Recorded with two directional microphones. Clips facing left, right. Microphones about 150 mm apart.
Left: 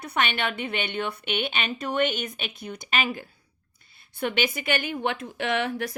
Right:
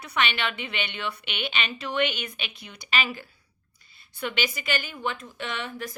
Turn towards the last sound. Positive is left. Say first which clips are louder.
# left 7 dB
turn(degrees=70)  # may be behind; listen again after turning